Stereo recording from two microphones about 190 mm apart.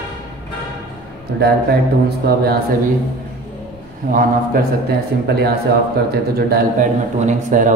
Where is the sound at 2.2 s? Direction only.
55° right (ahead or behind).